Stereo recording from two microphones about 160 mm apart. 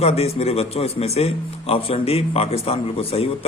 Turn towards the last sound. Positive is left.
turn(degrees=35)  # may be behind; listen again after turning